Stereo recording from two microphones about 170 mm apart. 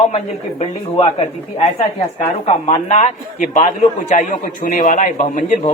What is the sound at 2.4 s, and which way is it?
A man's voice, 40° left (ahead or behind).